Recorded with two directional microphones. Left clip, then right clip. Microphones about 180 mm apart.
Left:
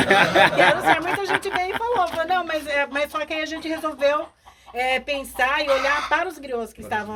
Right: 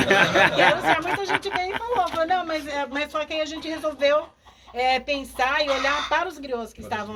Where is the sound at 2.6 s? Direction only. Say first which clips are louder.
Left 4 dB; 50° left (ahead or behind); by 4.2 s 30° left (ahead or behind).